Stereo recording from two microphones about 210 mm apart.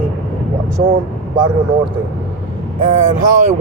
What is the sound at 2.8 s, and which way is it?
Speech, 35° right (ahead or behind).